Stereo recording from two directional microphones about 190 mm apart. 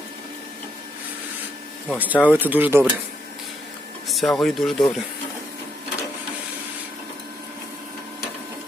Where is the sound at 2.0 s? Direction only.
10° right (ahead or behind).